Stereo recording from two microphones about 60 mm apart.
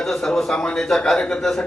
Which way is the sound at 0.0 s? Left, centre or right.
Centre.